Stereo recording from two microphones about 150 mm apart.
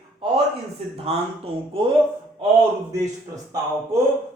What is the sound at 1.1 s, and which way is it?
Speech, 45° right (ahead or behind).